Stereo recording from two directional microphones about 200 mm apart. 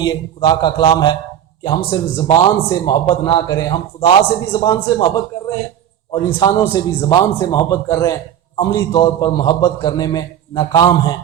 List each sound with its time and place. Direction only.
0.0 s a man's voice: 20° left (ahead or behind)